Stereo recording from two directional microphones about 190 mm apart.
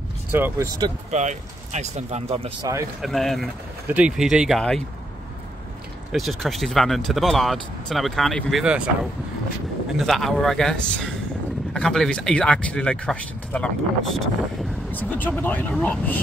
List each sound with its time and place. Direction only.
0.3 s speech: 10° right (ahead or behind)
1.1 s speech: 40° right (ahead or behind)
2.6 s speech: 15° right (ahead or behind)
3.0 s speech: centre (ahead or behind)
6.1 s speech: centre (ahead or behind)
9.9 s speech: centre (ahead or behind)